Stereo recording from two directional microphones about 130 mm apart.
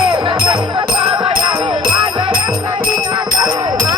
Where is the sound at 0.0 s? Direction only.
40° right (ahead or behind).